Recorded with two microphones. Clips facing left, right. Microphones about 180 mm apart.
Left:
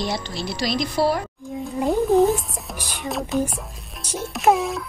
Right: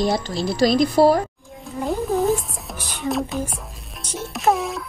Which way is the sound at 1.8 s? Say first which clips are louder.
Left 3 dB; centre (ahead or behind).